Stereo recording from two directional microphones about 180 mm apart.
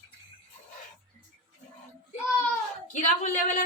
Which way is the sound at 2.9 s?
45° left (ahead or behind).